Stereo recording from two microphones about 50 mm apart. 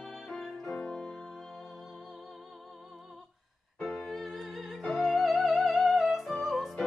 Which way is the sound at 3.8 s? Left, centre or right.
Centre.